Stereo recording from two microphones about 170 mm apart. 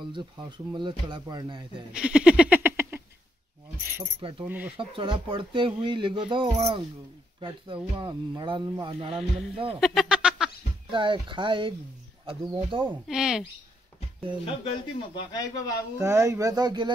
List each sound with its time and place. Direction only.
0.0 s speech: 25° right (ahead or behind)
2.0 s a sound: 5° right (ahead or behind)
4.2 s speech: 30° right (ahead or behind)
4.5 s speech: 10° right (ahead or behind)
4.7 s speech: 30° right (ahead or behind)
9.8 s a sound: centre (ahead or behind)
10.9 s speech: 30° right (ahead or behind)
12.9 s speech: 5° right (ahead or behind)
14.4 s speech: 35° left (ahead or behind)
16.0 s speech: 15° right (ahead or behind)